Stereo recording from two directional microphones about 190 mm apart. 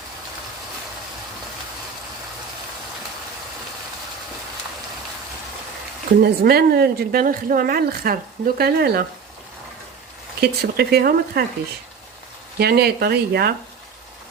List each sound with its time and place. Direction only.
6.2 s speech: 55° right (ahead or behind)
10.4 s speech: 55° right (ahead or behind)
12.5 s speech: 55° right (ahead or behind)